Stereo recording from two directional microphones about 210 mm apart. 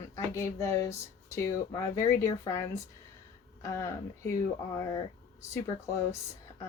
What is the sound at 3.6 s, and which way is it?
Speech, 15° left (ahead or behind).